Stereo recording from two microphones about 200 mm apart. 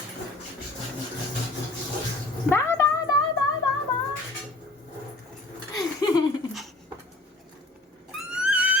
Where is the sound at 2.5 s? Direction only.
10° left (ahead or behind).